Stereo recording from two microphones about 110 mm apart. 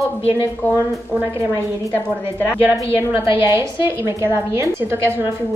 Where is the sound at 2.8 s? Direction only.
25° right (ahead or behind).